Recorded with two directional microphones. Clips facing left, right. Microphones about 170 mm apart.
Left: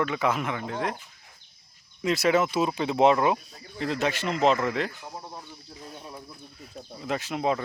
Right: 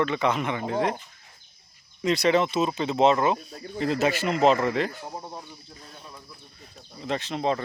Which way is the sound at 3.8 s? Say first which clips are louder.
Right 3 dB; centre (ahead or behind).